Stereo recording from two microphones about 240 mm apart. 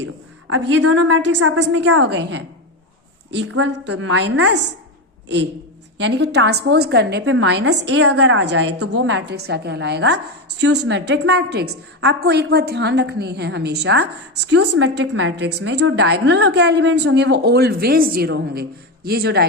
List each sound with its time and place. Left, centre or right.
0.0 s a sound: right
1.0 s a woman's voice: right
6.0 s a woman's voice: right
8.0 s a woman's voice: right
8.8 s a woman's voice: right
9.0 s a woman's voice: right